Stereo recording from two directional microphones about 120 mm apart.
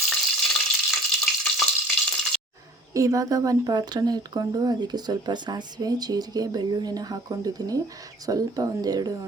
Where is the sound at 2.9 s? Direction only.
25° right (ahead or behind).